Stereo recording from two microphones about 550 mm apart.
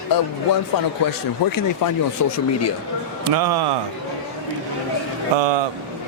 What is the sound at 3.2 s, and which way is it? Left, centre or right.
Speech, right.